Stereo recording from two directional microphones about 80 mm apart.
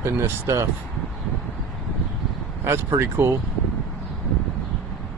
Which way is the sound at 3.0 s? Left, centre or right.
Right.